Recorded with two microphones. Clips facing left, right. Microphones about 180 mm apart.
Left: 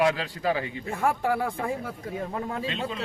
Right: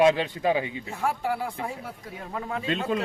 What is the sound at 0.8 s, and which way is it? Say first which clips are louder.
Speech: left 2 dB; 55° left (ahead or behind).